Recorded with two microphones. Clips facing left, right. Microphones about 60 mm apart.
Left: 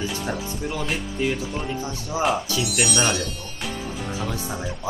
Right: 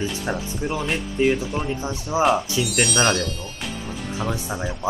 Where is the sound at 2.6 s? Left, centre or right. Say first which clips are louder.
Right 2 dB; centre.